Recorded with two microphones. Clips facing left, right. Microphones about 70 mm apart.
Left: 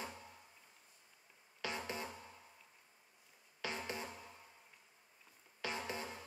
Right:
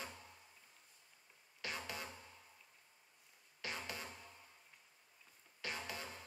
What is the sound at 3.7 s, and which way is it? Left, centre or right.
Music, left.